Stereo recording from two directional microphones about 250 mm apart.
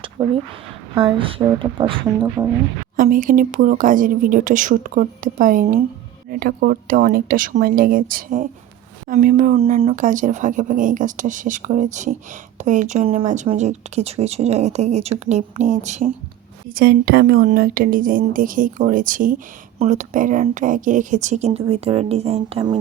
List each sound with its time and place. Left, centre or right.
0.2 s speech: centre
2.9 s speech: right